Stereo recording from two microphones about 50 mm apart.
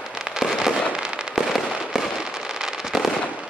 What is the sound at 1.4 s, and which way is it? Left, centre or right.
Fireworks, centre.